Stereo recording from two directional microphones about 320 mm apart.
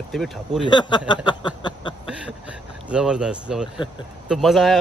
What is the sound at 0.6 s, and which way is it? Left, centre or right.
Speech, centre.